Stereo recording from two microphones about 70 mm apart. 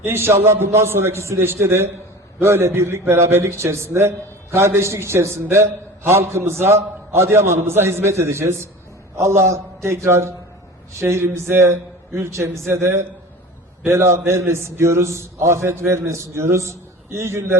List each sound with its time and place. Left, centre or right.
0.0 s a man's voice: right